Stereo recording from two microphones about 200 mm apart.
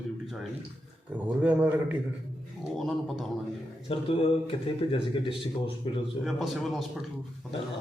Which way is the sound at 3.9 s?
25° left (ahead or behind).